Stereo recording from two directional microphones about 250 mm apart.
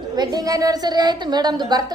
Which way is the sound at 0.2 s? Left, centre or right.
Centre.